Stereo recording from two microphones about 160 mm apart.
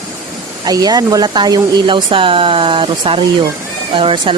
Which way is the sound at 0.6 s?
25° right (ahead or behind).